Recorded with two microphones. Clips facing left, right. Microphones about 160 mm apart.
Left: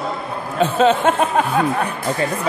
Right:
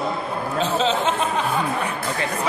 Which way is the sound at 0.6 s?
55° left (ahead or behind).